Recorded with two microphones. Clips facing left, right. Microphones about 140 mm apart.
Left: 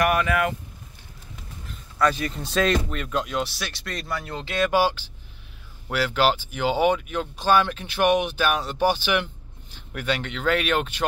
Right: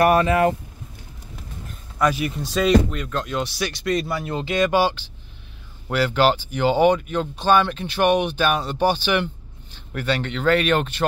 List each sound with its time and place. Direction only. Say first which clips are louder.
0.0 s speech: right 5 dB; 30° right (ahead or behind)
2.0 s speech: right 2 dB; 10° right (ahead or behind); by 11.1 s 10° left (ahead or behind)